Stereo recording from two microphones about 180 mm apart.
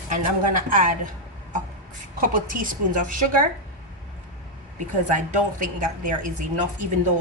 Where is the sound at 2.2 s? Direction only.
50° right (ahead or behind).